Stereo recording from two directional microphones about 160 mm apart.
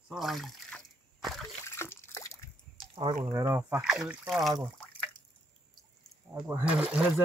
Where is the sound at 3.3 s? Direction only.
20° right (ahead or behind).